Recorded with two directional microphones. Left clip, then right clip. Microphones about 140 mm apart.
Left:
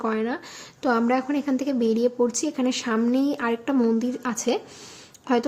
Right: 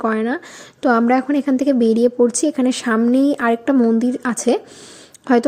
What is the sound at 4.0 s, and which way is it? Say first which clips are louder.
A woman's voice: right 7 dB; 35° right (ahead or behind).